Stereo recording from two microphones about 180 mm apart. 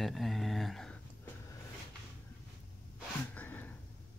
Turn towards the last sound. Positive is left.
turn(degrees=10)  # may be behind; listen again after turning